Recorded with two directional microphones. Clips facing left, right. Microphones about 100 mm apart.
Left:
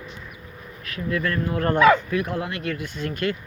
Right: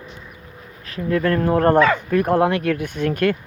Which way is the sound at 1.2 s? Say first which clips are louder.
Right 9 dB; 50° right (ahead or behind).